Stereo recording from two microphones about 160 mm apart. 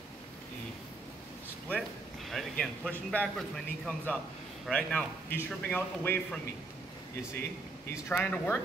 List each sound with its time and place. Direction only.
1.7 s a man's voice: centre (ahead or behind)
7.9 s a man's voice: 10° left (ahead or behind)